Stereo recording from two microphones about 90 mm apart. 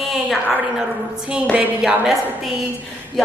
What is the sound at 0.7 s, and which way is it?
A woman's voice, 5° right (ahead or behind).